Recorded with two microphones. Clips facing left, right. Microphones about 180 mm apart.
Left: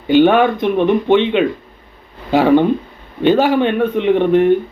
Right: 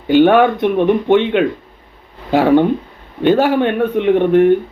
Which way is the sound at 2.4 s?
10° right (ahead or behind).